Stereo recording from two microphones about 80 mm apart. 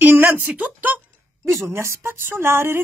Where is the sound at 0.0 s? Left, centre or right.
Right.